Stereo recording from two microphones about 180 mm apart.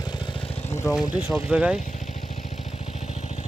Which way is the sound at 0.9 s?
5° right (ahead or behind).